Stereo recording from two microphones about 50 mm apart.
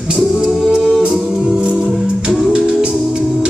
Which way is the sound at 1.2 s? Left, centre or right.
Centre.